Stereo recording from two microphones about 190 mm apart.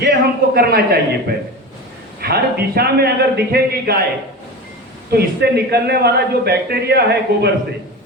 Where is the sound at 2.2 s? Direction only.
55° right (ahead or behind).